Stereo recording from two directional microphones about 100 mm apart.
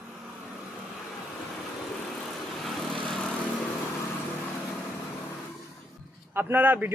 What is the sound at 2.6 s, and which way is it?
Vehicle, 5° left (ahead or behind).